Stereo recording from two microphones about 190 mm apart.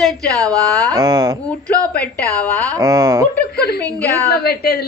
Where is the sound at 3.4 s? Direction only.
55° left (ahead or behind).